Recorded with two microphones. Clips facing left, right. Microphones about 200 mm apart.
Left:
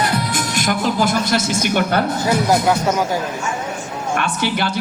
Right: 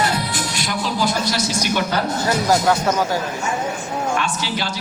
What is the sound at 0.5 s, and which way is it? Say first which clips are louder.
Music: left 6 dB; 50° left (ahead or behind).